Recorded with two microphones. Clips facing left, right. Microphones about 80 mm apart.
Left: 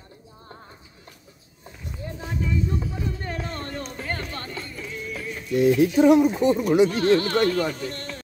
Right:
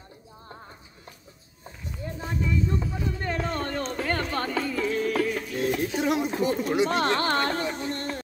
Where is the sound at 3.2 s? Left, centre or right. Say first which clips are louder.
Right 3 dB; right.